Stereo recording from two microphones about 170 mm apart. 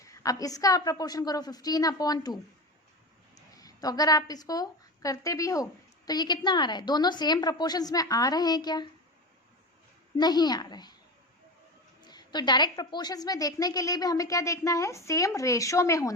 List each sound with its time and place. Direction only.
0.0 s a woman's voice: 20° left (ahead or behind)
10.2 s a woman's voice: 25° left (ahead or behind)
12.0 s a woman's voice: 25° left (ahead or behind)